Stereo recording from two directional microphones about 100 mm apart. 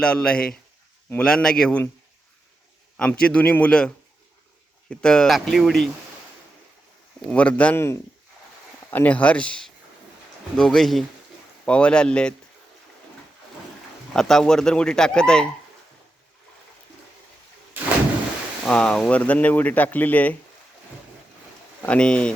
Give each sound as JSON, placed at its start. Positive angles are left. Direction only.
{"t": 0.0, "sound": "speech", "side_deg": 10}
{"t": 3.0, "sound": "speech", "side_deg": 10}
{"t": 7.3, "sound": "speech", "side_deg": 15}
{"t": 8.9, "sound": "speech", "side_deg": 15}
{"t": 14.1, "sound": "speech", "side_deg": 5}
{"t": 18.7, "sound": "speech", "side_deg": 10}
{"t": 21.8, "sound": "speech", "side_deg": 10}